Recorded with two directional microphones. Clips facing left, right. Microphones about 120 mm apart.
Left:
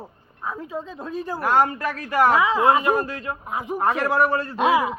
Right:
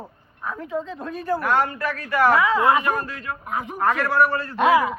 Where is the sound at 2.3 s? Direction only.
15° left (ahead or behind).